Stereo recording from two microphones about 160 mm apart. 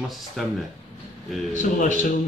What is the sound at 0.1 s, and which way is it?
Speech, centre (ahead or behind).